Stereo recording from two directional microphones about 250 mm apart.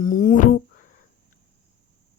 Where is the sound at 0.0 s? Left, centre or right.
Left.